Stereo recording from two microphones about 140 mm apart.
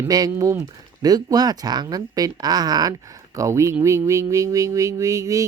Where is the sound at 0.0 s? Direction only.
25° right (ahead or behind).